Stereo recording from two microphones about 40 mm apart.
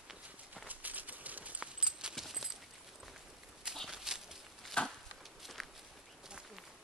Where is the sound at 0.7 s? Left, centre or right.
Right.